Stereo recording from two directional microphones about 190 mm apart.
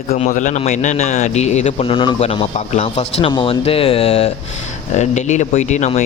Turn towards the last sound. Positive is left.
turn(degrees=35)  # may be behind; listen again after turning